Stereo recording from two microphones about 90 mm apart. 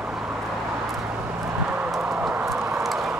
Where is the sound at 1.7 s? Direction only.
15° right (ahead or behind).